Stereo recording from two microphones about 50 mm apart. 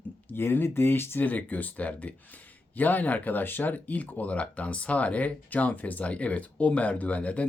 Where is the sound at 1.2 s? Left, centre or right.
Left.